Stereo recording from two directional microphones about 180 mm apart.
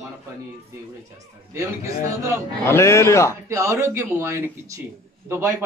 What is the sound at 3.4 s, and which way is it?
A man's voice, 15° right (ahead or behind).